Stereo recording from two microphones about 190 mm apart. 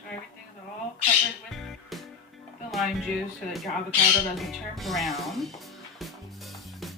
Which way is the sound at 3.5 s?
Centre (ahead or behind).